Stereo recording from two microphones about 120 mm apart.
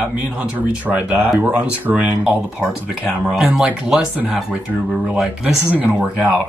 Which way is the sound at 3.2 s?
10° right (ahead or behind).